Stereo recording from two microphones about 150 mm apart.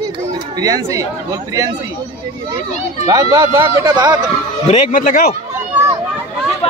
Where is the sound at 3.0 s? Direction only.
20° right (ahead or behind).